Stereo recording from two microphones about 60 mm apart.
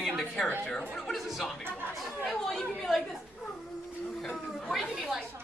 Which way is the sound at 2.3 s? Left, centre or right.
Centre.